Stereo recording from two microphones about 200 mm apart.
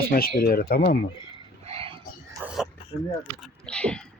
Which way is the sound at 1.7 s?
30° right (ahead or behind).